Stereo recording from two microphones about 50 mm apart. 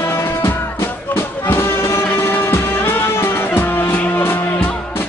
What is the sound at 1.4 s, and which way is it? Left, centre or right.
Music, left.